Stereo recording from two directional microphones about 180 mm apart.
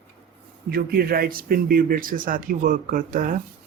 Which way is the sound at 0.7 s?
55° right (ahead or behind).